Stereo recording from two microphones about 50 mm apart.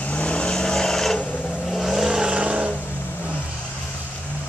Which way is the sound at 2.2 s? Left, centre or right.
Right.